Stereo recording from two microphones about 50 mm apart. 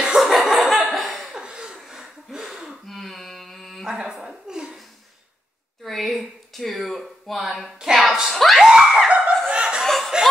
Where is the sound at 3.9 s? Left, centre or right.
Centre.